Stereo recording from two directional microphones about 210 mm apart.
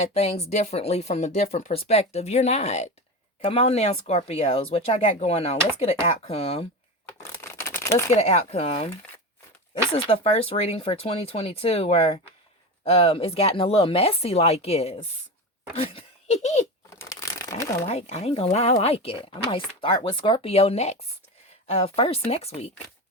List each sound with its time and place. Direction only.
0.0 s speech: 30° left (ahead or behind)
7.6 s crumpling: 10° left (ahead or behind)
8.1 s speech: 30° left (ahead or behind)
17.0 s a sound: 15° left (ahead or behind)
17.8 s speech: 30° left (ahead or behind)